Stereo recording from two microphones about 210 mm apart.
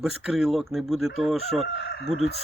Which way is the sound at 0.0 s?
5° right (ahead or behind).